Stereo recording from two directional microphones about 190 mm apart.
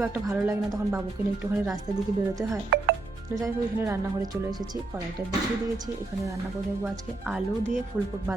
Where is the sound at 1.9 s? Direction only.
5° right (ahead or behind).